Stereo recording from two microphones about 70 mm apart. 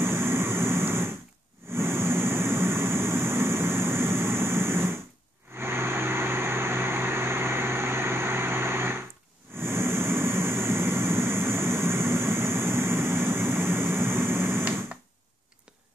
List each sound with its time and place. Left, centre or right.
0.0 s vehicle: right